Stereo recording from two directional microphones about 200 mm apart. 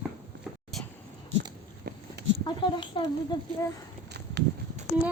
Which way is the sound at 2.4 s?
25° left (ahead or behind).